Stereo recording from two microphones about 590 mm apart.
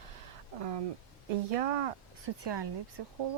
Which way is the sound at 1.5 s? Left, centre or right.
Right.